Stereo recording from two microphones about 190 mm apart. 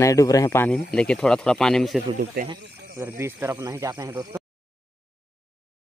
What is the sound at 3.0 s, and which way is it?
Speech, 15° right (ahead or behind).